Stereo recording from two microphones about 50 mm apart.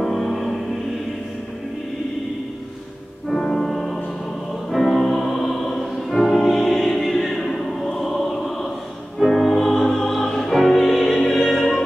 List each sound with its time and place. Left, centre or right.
0.0 s music: centre
3.3 s music: centre